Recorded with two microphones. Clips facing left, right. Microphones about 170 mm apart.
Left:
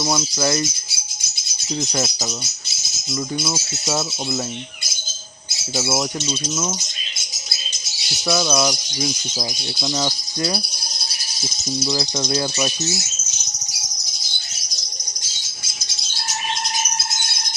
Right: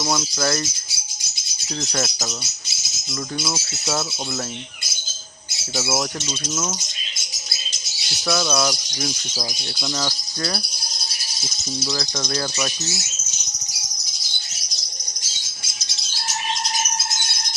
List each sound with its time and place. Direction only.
0.0 s speech: 10° left (ahead or behind)
1.8 s speech: 10° left (ahead or behind)
5.7 s speech: 10° left (ahead or behind)
8.3 s speech: 10° left (ahead or behind)
11.9 s speech: 15° left (ahead or behind)